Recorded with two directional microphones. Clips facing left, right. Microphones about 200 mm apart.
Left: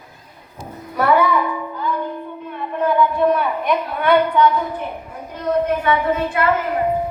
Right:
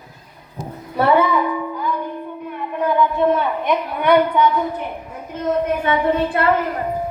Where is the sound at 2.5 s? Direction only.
20° right (ahead or behind).